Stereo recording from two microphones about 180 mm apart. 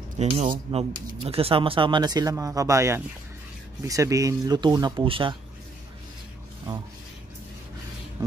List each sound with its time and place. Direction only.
0.2 s speech: 40° right (ahead or behind)